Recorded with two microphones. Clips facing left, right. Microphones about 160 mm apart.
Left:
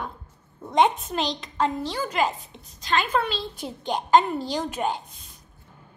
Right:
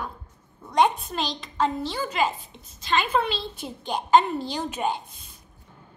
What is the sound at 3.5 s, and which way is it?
Speech, 15° left (ahead or behind).